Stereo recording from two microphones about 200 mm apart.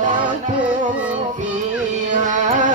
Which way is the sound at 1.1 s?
40° right (ahead or behind).